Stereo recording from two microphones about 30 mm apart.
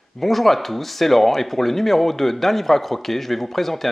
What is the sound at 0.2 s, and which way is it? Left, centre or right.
Speech, centre.